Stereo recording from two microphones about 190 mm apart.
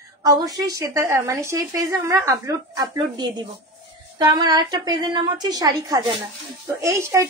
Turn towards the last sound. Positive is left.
turn(degrees=-15)  # may be behind; listen again after turning